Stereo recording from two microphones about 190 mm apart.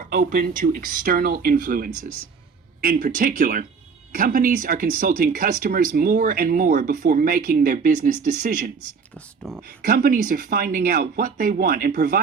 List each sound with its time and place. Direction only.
0.0 s speech: 45° right (ahead or behind)
9.1 s speech: centre (ahead or behind)
9.6 s speech: 50° right (ahead or behind)